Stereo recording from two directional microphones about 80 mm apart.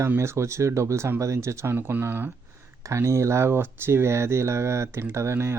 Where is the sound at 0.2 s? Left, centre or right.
Right.